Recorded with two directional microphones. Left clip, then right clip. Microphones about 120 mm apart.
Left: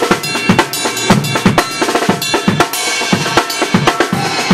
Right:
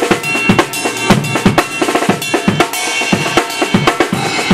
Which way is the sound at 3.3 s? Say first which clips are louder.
Even; centre (ahead or behind).